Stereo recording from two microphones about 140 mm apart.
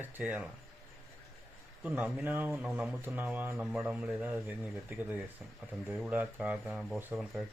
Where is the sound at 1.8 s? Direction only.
10° right (ahead or behind).